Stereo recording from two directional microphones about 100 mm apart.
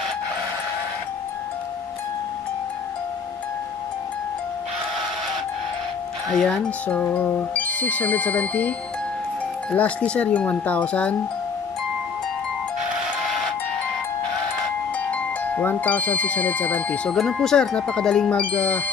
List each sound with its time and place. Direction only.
6.2 s speech: 5° left (ahead or behind)
7.1 s speech: 25° left (ahead or behind)
15.0 s speech: 15° left (ahead or behind)